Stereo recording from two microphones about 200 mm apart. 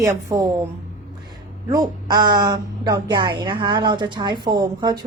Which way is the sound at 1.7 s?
20° right (ahead or behind).